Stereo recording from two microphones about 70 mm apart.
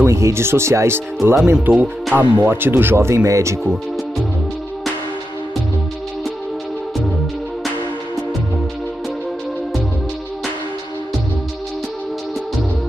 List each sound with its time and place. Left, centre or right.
0.0 s speech: right
1.7 s speech: right